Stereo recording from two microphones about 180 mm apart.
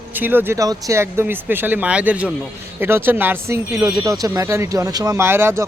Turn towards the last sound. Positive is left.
turn(degrees=-15)  # may be behind; listen again after turning